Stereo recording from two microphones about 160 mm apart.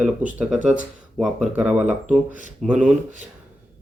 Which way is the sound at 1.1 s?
Centre (ahead or behind).